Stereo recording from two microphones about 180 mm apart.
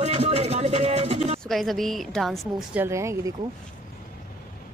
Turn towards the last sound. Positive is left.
turn(degrees=-15)  # may be behind; listen again after turning